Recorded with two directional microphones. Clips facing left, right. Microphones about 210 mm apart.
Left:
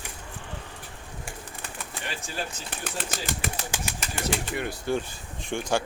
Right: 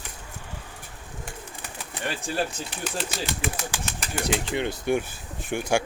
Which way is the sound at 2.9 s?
45° left (ahead or behind).